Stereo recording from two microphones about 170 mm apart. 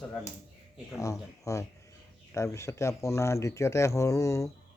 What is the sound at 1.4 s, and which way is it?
Speech, 20° left (ahead or behind).